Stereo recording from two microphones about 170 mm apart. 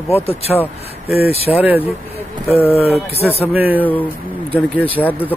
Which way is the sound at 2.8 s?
35° left (ahead or behind).